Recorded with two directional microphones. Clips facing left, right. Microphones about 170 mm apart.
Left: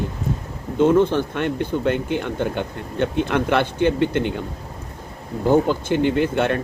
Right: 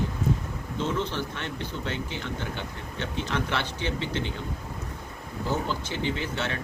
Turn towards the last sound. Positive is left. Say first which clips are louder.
# left 12 dB
turn(degrees=55)  # may be behind; listen again after turning